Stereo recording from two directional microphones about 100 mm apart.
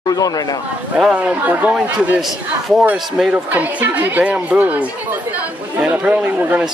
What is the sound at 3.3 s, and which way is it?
Speech, 15° right (ahead or behind).